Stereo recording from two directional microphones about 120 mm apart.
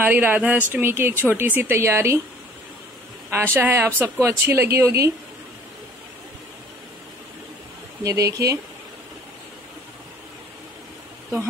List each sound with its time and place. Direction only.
0.0 s speech: 15° right (ahead or behind)
3.3 s speech: 20° right (ahead or behind)
8.0 s speech: 25° right (ahead or behind)